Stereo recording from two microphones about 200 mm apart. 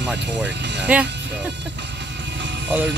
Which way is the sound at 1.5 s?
60° right (ahead or behind).